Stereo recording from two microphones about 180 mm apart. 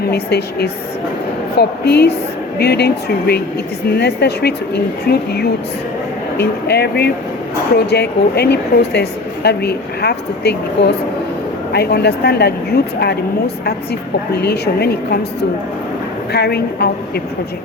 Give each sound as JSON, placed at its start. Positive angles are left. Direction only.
{"t": 0.0, "sound": "speech", "side_deg": 65}
{"t": 6.3, "sound": "speech", "side_deg": 65}
{"t": 14.4, "sound": "speech", "side_deg": 65}
{"t": 16.3, "sound": "speech", "side_deg": 65}